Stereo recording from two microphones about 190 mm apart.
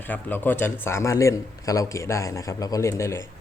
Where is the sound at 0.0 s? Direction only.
10° left (ahead or behind).